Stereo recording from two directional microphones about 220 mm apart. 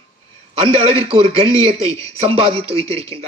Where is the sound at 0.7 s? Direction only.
25° right (ahead or behind).